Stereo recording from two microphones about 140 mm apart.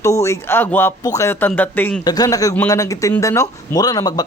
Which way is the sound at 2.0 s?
25° left (ahead or behind).